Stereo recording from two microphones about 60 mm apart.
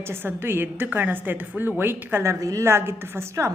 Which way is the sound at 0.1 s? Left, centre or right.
Right.